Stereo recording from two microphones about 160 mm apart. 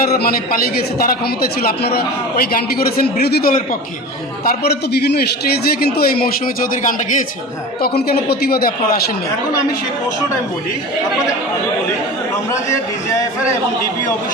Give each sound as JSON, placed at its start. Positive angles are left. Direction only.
{"t": 0.0, "sound": "a man's voice", "side_deg": 70}
{"t": 4.4, "sound": "a man's voice", "side_deg": 90}